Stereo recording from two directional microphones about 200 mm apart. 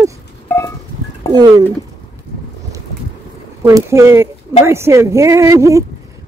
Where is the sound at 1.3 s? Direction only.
20° right (ahead or behind).